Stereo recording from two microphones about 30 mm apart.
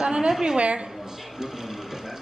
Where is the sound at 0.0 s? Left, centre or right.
Right.